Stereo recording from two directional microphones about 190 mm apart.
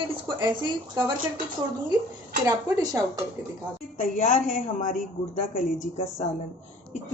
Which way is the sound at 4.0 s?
45° left (ahead or behind).